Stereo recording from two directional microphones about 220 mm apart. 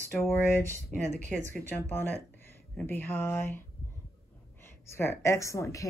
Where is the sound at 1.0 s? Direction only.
35° right (ahead or behind).